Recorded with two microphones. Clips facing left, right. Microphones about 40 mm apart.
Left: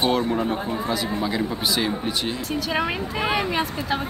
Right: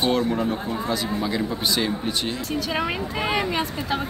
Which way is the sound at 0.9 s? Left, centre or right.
Centre.